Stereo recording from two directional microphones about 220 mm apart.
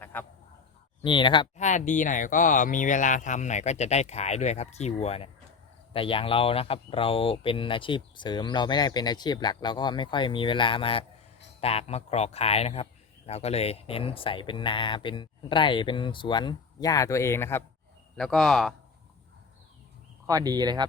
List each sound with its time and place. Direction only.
0.0 s honk: 10° left (ahead or behind)
1.0 s a man's voice: 20° left (ahead or behind)
1.5 s a man's voice: 35° left (ahead or behind); by 17.6 s 10° left (ahead or behind)
18.2 s a man's voice: centre (ahead or behind)
20.2 s speech: 15° right (ahead or behind)